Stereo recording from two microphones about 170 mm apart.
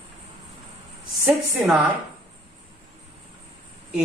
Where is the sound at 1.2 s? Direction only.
5° right (ahead or behind).